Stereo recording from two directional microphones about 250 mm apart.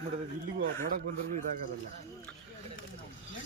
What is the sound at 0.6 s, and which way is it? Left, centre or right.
Speech, right.